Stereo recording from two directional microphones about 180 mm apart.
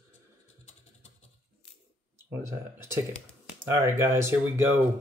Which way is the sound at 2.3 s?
15° right (ahead or behind).